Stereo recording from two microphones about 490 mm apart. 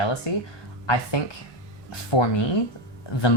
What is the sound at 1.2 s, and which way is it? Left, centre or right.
Speech, left.